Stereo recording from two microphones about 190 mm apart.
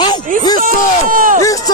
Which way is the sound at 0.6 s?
45° right (ahead or behind).